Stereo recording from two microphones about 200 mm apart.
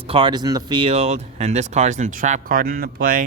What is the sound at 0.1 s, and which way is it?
Speech, 25° right (ahead or behind).